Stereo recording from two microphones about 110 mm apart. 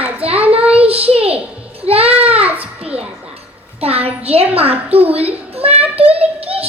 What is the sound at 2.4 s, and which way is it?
Speech, 15° right (ahead or behind).